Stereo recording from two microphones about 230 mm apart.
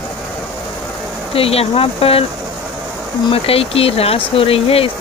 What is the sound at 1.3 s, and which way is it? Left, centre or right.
Speech, left.